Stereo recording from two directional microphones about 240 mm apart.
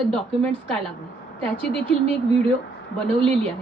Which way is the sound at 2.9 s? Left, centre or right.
Centre.